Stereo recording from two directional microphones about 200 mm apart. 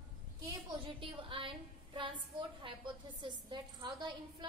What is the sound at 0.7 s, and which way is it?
A woman's voice, 25° right (ahead or behind).